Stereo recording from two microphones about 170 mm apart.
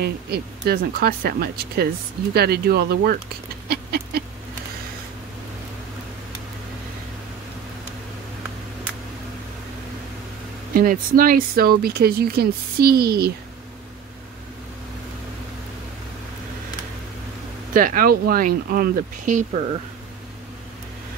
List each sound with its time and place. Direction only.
0.0 s speech: 70° right (ahead or behind)
3.6 s a sound: 65° right (ahead or behind)
10.7 s speech: 55° right (ahead or behind)
17.7 s speech: 55° right (ahead or behind)